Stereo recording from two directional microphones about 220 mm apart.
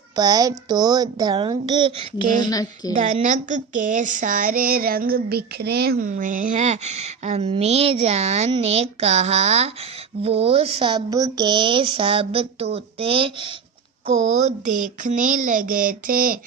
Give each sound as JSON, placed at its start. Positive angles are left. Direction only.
{"t": 0.2, "sound": "speech", "side_deg": -15}
{"t": 2.5, "sound": "a woman's voice", "side_deg": 15}
{"t": 2.9, "sound": "speech", "side_deg": -35}
{"t": 14.1, "sound": "a woman's voice", "side_deg": -65}
{"t": 14.3, "sound": "speech", "side_deg": -35}